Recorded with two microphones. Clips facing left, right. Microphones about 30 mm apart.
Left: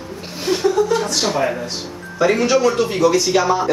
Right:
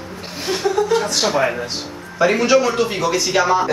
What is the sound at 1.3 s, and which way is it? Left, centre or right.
Speech, right.